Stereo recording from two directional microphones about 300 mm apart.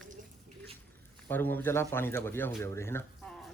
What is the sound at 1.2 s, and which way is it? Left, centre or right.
Speech, centre.